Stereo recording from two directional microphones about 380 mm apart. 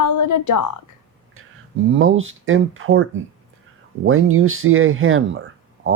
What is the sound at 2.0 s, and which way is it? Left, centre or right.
Speech, right.